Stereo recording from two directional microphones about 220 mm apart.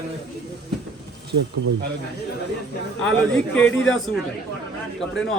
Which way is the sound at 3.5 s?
5° left (ahead or behind).